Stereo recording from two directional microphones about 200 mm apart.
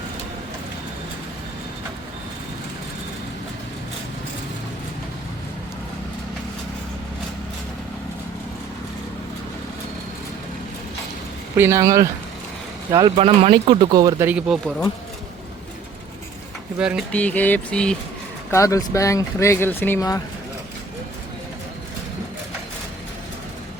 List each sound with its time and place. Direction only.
11.5 s speech: 15° right (ahead or behind)
14.3 s speech: 5° right (ahead or behind)
16.7 s speech: 5° right (ahead or behind)
17.1 s speech: 5° left (ahead or behind)
18.5 s speech: 15° left (ahead or behind)